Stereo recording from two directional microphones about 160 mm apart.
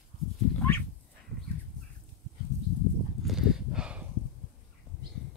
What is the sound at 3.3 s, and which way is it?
Horse, centre (ahead or behind).